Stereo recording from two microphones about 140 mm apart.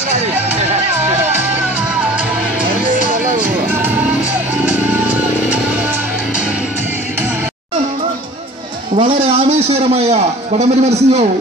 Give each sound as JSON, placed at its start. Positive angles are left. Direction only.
{"t": 2.7, "sound": "music", "side_deg": -70}
{"t": 3.7, "sound": "music", "side_deg": -15}
{"t": 8.9, "sound": "a man's voice", "side_deg": -45}